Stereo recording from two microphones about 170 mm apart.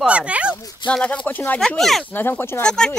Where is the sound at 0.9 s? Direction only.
5° left (ahead or behind).